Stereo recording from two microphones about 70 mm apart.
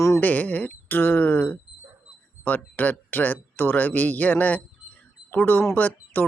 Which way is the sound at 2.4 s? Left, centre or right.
Left.